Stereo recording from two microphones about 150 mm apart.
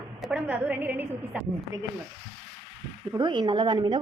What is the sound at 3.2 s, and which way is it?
Speech, 30° right (ahead or behind).